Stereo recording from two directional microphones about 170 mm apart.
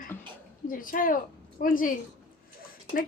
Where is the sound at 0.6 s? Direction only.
55° left (ahead or behind).